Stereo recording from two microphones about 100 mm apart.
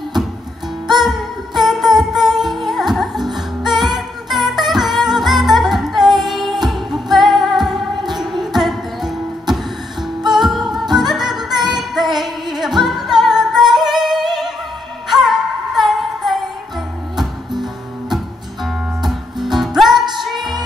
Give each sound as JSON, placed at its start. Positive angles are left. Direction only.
{"t": 0.8, "sound": "music", "side_deg": 0}
{"t": 13.7, "sound": "yodeling", "side_deg": -5}
{"t": 15.0, "sound": "music", "side_deg": 0}
{"t": 18.1, "sound": "music", "side_deg": 0}